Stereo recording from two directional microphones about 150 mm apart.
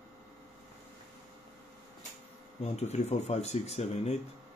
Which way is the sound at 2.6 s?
45° left (ahead or behind).